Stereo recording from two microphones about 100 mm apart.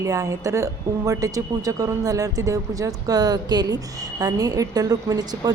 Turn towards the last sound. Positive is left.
turn(degrees=-40)  # may be behind; listen again after turning